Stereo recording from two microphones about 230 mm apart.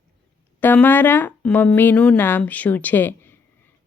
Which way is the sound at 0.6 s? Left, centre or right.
Centre.